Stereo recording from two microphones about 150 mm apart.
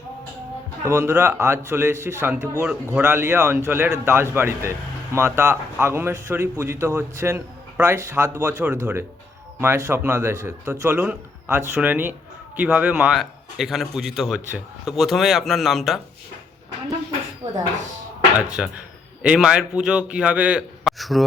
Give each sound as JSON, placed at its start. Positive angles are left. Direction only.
{"t": 0.9, "sound": "a man's voice", "side_deg": -15}
{"t": 18.3, "sound": "a man's voice", "side_deg": -10}